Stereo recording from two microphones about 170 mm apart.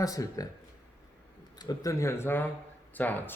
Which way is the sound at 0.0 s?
20° left (ahead or behind).